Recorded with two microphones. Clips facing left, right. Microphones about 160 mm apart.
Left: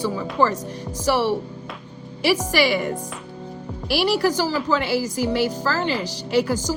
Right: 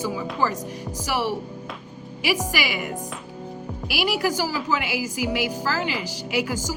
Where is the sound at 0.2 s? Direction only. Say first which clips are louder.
Left 7 dB; 50° left (ahead or behind).